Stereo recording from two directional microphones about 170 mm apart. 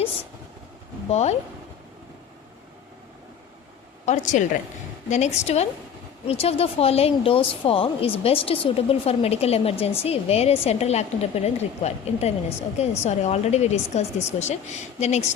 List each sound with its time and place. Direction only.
1.1 s speech: 40° left (ahead or behind)
4.0 s a woman's voice: 45° left (ahead or behind)